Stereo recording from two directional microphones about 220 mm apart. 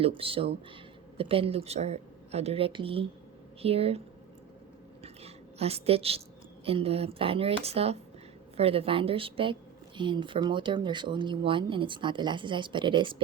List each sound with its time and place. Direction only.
0.0 s speech: 25° right (ahead or behind)
5.0 s a sound: 30° right (ahead or behind)
6.7 s speech: 25° right (ahead or behind)